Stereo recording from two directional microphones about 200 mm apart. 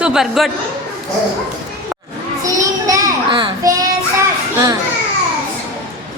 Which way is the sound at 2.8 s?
15° right (ahead or behind).